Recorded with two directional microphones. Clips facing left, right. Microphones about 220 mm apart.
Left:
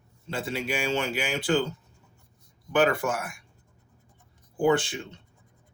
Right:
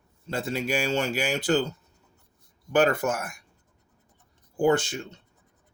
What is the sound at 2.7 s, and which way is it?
Speech, 45° right (ahead or behind).